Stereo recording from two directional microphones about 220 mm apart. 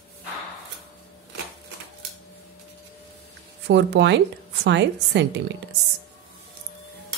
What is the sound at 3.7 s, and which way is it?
A woman's voice, 50° right (ahead or behind).